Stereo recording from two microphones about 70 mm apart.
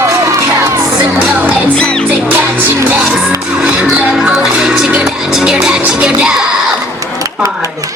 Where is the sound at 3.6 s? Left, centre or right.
Centre.